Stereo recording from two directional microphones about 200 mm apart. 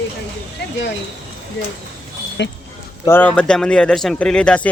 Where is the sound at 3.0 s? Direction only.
10° left (ahead or behind).